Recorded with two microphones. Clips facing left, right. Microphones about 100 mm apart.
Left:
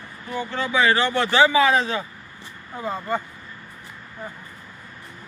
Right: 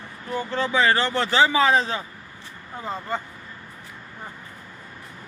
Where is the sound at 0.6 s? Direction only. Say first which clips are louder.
Left 1 dB; 35° right (ahead or behind).